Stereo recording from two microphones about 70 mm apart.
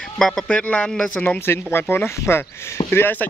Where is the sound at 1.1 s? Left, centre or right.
Left.